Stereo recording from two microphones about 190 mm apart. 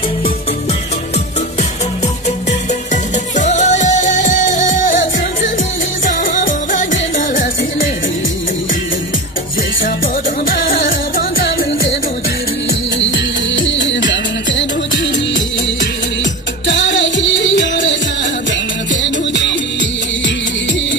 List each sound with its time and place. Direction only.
3.3 s music: 40° left (ahead or behind)
10.5 s music: 50° left (ahead or behind)
13.0 s music: 75° left (ahead or behind)
16.6 s music: 75° left (ahead or behind)